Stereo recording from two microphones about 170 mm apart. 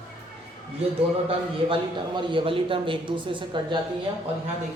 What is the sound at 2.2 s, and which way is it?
Speech, 30° right (ahead or behind).